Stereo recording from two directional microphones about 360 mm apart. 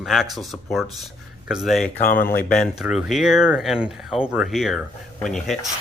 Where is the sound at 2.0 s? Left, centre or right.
Left.